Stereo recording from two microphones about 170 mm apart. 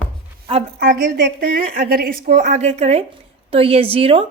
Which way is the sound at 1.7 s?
60° right (ahead or behind).